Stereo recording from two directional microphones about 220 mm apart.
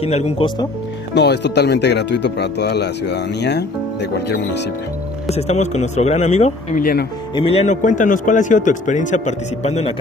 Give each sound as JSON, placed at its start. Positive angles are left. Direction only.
{"t": 0.0, "sound": "speech", "side_deg": 30}
{"t": 1.1, "sound": "speech", "side_deg": 50}
{"t": 5.3, "sound": "a man's voice", "side_deg": 30}
{"t": 7.3, "sound": "a man's voice", "side_deg": 25}